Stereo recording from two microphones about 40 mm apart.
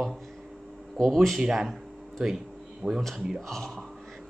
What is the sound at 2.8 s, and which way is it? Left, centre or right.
Speech, right.